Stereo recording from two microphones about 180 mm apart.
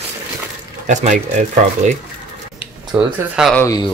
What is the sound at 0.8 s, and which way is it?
Speech, 45° right (ahead or behind).